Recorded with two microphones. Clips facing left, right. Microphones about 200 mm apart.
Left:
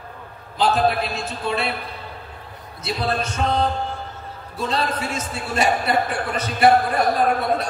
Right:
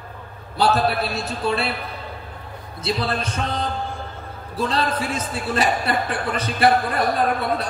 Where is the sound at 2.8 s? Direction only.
30° right (ahead or behind).